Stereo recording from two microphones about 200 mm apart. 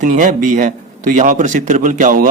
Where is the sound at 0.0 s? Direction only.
40° right (ahead or behind).